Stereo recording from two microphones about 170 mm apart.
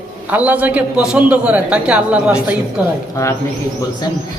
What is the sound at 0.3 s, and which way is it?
A man's voice, 10° right (ahead or behind).